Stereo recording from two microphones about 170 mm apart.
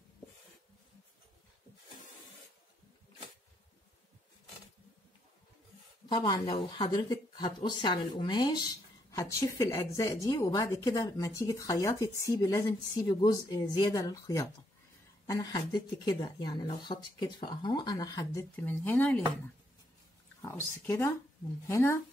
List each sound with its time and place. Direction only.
6.0 s speech: 25° left (ahead or behind); by 19.2 s 10° left (ahead or behind)
20.4 s speech: 15° left (ahead or behind)